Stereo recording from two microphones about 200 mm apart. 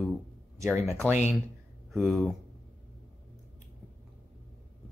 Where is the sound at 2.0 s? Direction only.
Centre (ahead or behind).